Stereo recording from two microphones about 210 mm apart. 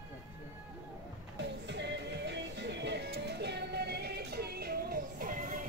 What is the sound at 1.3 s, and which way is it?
Music, 55° right (ahead or behind).